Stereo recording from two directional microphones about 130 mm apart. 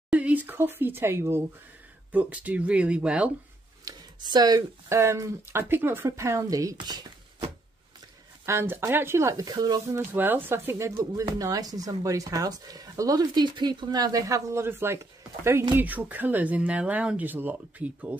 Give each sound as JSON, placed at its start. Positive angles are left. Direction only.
{"t": 0.1, "sound": "speech", "side_deg": -10}
{"t": 3.8, "sound": "speech", "side_deg": -30}
{"t": 8.5, "sound": "speech", "side_deg": -20}
{"t": 10.1, "sound": "speech", "side_deg": -15}